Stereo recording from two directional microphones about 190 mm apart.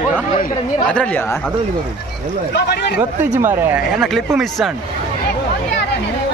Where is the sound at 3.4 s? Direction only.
10° right (ahead or behind).